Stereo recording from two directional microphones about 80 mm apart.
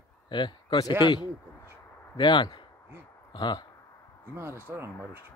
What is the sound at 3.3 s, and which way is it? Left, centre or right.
Speech, left.